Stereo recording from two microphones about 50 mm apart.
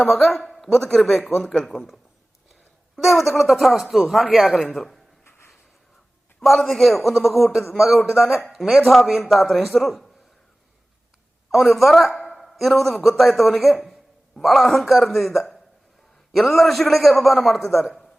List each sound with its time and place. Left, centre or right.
0.3 s a man's voice: centre
5.2 s a sound: left
6.4 s a man's voice: centre
11.5 s a man's voice: centre
17.6 s speech: left